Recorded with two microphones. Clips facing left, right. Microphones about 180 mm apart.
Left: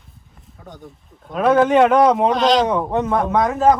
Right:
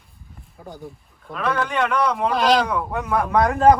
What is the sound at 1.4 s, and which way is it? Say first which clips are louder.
Speech: left 9 dB; 40° left (ahead or behind).